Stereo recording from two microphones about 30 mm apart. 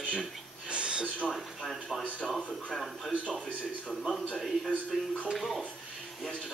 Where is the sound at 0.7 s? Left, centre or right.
Right.